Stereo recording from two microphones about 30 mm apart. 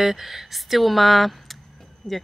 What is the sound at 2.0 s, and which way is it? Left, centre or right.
Speech, left.